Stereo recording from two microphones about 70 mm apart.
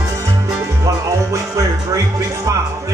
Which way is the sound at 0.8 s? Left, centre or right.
Right.